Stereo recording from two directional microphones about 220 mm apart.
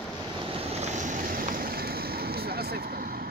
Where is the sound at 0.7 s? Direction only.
30° right (ahead or behind).